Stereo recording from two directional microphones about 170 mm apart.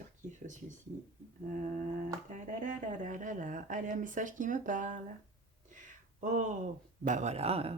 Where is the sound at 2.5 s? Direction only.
50° right (ahead or behind).